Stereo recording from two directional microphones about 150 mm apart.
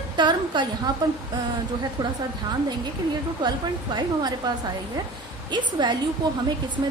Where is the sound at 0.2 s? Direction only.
30° right (ahead or behind).